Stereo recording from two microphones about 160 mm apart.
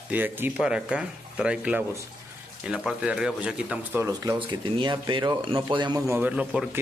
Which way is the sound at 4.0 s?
20° right (ahead or behind).